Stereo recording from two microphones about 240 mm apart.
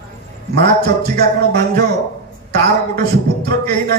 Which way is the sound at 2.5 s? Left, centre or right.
Right.